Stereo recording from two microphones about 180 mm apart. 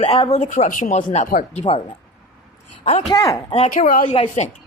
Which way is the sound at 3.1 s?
25° left (ahead or behind).